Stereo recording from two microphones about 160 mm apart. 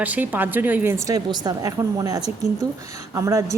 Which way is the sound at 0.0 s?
10° right (ahead or behind).